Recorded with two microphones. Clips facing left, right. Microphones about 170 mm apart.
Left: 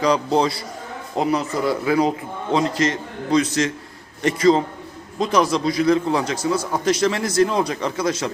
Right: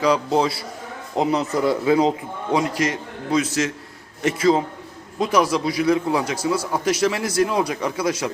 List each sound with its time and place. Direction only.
0.0 s a man's voice: 5° right (ahead or behind)
1.1 s speech: 20° right (ahead or behind)
2.6 s a man's voice: 10° right (ahead or behind)